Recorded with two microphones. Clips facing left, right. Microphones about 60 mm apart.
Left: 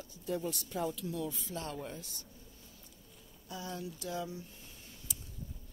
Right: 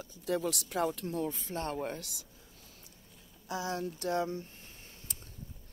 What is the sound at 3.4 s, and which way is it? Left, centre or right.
Speech, right.